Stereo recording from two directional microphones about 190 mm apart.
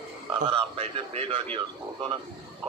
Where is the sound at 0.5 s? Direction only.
30° right (ahead or behind).